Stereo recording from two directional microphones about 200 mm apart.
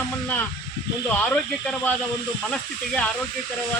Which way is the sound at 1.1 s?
5° left (ahead or behind).